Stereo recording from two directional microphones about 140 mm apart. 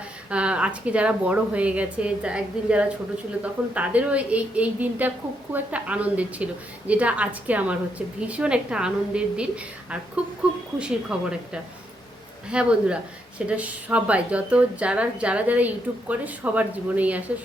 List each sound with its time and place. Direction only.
0.3 s a woman's voice: 10° right (ahead or behind)